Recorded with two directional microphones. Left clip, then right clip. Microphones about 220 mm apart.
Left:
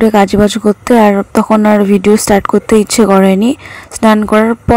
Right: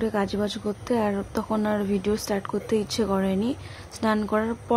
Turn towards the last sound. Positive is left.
turn(degrees=35)  # may be behind; listen again after turning